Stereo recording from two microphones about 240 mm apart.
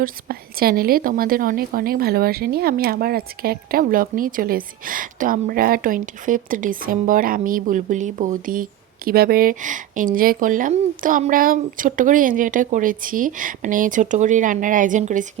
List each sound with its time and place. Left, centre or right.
0.0 s a woman's voice: right